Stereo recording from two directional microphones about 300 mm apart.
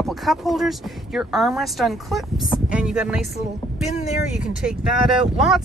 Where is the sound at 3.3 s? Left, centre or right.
Left.